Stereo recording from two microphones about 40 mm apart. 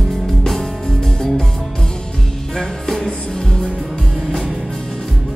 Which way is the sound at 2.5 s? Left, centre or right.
Centre.